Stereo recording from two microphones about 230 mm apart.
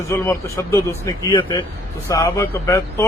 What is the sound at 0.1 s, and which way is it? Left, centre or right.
Speech, centre.